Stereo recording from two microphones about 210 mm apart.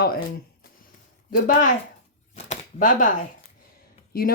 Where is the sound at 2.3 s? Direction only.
35° left (ahead or behind).